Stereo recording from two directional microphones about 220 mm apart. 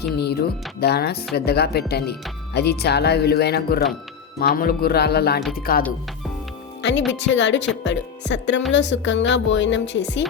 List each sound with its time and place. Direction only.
0.2 s speech: 45° left (ahead or behind)
7.1 s a woman's voice: 55° left (ahead or behind)